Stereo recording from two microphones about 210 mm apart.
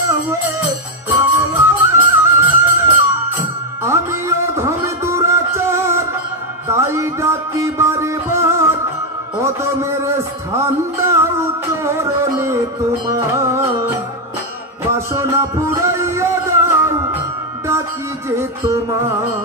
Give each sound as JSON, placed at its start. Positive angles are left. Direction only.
{"t": 0.0, "sound": "music", "side_deg": -15}
{"t": 9.4, "sound": "a sound", "side_deg": -15}
{"t": 10.6, "sound": "music", "side_deg": -15}